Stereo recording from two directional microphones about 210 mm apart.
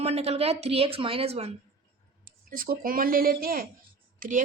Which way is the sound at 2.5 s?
45° right (ahead or behind).